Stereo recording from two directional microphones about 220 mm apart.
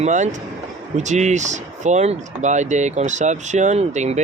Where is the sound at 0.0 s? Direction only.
35° right (ahead or behind).